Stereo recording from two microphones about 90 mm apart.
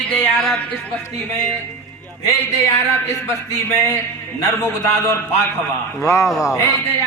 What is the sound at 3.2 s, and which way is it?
A man's voice, 35° left (ahead or behind).